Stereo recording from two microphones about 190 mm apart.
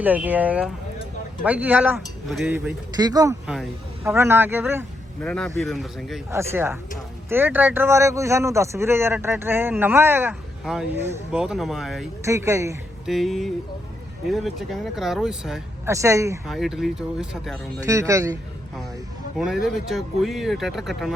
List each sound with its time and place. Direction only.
0.0 s speech: 10° right (ahead or behind)
2.9 s speech: 20° right (ahead or behind)
3.4 s speech: centre (ahead or behind)
4.0 s speech: 15° right (ahead or behind)
5.2 s speech: 5° left (ahead or behind)
6.3 s speech: 15° right (ahead or behind)
12.2 s speech: 15° right (ahead or behind)
13.1 s speech: centre (ahead or behind)
15.9 s speech: 15° right (ahead or behind)
16.5 s speech: centre (ahead or behind)
17.8 s speech: 15° right (ahead or behind)
19.4 s speech: centre (ahead or behind)